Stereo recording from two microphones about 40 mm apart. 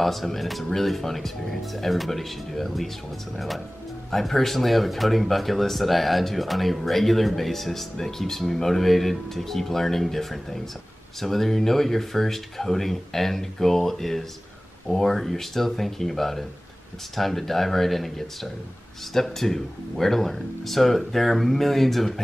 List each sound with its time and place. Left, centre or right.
0.0 s speech: centre